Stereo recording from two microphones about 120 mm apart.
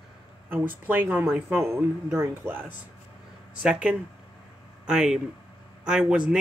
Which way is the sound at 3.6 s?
10° right (ahead or behind).